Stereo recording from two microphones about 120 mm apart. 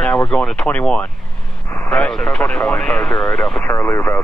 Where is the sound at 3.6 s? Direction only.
20° left (ahead or behind).